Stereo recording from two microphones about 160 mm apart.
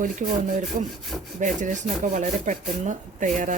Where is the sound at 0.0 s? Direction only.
55° right (ahead or behind).